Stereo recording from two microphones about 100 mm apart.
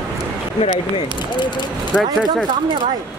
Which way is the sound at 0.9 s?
50° left (ahead or behind).